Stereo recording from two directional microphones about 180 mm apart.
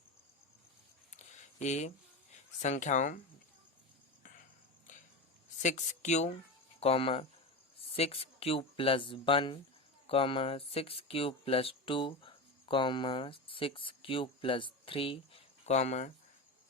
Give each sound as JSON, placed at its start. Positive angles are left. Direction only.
{"t": 1.1, "sound": "a sound", "side_deg": 40}
{"t": 2.3, "sound": "speech", "side_deg": 40}
{"t": 5.6, "sound": "speech", "side_deg": 40}